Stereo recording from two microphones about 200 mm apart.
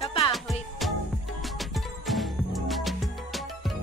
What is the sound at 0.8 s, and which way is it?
Music, centre (ahead or behind).